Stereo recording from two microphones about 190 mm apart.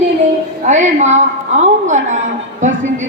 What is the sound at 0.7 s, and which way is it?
A woman's voice, 40° right (ahead or behind).